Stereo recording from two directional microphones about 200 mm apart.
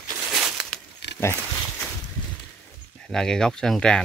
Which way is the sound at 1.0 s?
60° left (ahead or behind).